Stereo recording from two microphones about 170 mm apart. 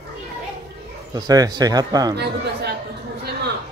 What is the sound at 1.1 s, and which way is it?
A man's voice, 20° right (ahead or behind).